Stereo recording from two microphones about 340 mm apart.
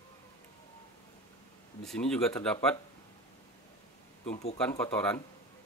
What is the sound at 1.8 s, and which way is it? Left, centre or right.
Speech, centre.